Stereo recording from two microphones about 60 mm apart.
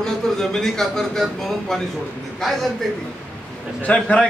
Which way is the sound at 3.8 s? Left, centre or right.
Centre.